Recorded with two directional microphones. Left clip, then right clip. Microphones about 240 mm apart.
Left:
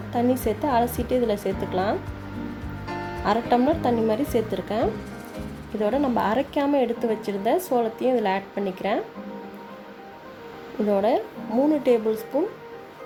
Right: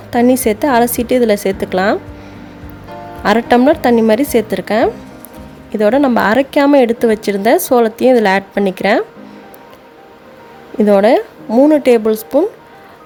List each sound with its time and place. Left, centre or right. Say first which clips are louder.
0.1 s speech: right 12 dB; right
3.2 s speech: right 11 dB; right
10.8 s speech: right 12 dB; right